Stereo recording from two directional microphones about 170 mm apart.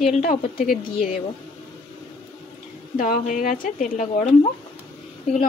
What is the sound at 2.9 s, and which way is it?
Speech, 50° left (ahead or behind).